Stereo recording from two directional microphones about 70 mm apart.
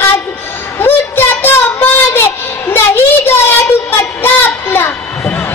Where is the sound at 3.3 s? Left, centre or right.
Left.